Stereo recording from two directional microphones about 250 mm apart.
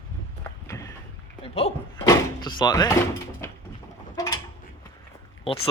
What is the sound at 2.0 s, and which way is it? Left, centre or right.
Door, centre.